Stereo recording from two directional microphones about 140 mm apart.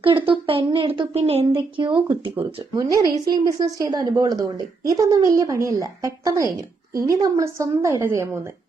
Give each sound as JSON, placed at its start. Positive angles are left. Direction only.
{"t": 0.0, "sound": "a woman's voice", "side_deg": -40}
{"t": 2.7, "sound": "a woman's voice", "side_deg": -25}